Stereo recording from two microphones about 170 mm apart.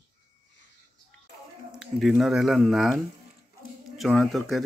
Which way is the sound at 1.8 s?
Centre (ahead or behind).